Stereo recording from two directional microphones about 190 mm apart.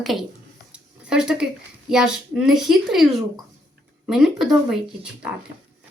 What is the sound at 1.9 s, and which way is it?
A woman's voice, 5° right (ahead or behind).